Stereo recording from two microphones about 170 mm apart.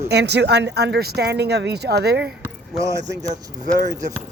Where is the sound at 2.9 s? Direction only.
20° right (ahead or behind).